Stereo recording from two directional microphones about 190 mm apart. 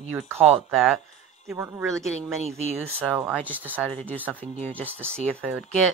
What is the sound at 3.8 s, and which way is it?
Speech, 10° left (ahead or behind).